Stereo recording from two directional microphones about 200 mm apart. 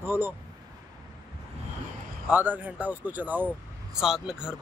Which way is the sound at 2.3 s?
10° right (ahead or behind).